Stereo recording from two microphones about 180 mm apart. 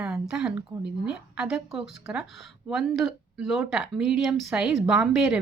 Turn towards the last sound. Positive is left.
turn(degrees=0)  # may be behind; listen again after turning